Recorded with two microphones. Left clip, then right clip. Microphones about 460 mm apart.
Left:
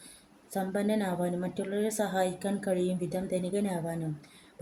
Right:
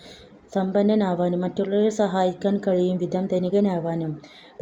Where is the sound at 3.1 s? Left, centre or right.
Left.